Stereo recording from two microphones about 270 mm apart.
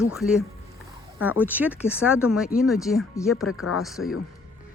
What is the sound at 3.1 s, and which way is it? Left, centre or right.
Speech, centre.